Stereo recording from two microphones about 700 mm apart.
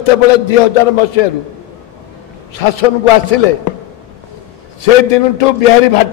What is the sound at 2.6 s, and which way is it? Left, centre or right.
Speech, left.